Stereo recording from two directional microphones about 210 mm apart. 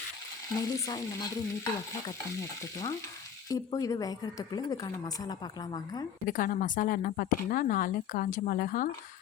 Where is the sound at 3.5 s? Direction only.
15° left (ahead or behind).